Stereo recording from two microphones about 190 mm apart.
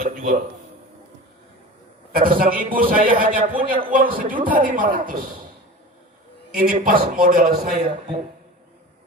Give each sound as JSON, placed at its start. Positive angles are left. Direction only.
{"t": 0.0, "sound": "a sound", "side_deg": -45}
{"t": 2.1, "sound": "a man's voice", "side_deg": -50}
{"t": 6.6, "sound": "a man's voice", "side_deg": -45}